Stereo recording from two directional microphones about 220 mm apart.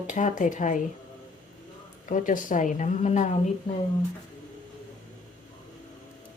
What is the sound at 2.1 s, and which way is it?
Speech, 35° left (ahead or behind).